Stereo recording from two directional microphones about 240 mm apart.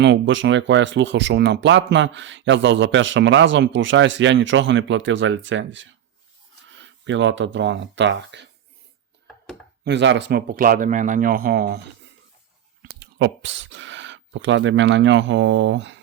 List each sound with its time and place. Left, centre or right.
0.0 s speech: right
9.8 s speech: right
12.8 s speech: right